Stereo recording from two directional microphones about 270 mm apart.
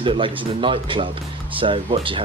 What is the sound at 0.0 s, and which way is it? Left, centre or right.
Speech, centre.